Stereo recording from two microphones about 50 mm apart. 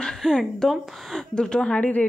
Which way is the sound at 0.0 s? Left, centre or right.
Centre.